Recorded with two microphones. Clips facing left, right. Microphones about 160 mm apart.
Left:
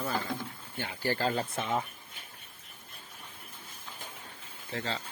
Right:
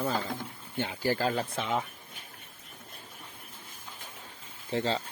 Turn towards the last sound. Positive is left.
turn(degrees=-30)  # may be behind; listen again after turning